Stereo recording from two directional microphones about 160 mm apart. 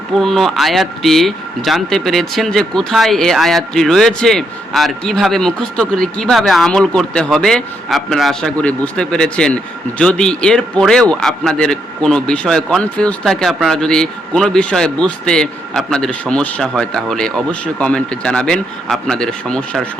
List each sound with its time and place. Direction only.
0.1 s a man's voice: centre (ahead or behind)